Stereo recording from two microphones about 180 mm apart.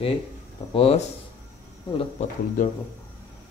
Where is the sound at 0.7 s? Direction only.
35° left (ahead or behind).